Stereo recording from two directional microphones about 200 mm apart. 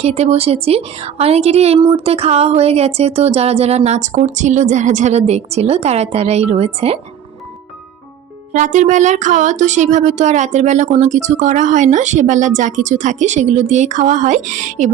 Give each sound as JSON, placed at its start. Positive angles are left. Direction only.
{"t": 0.0, "sound": "speech", "side_deg": -30}
{"t": 8.5, "sound": "speech", "side_deg": -40}